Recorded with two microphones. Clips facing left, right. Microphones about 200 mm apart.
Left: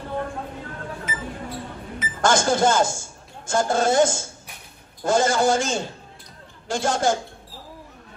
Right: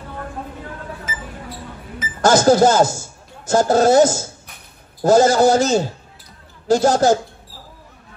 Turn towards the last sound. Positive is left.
turn(degrees=-40)  # may be behind; listen again after turning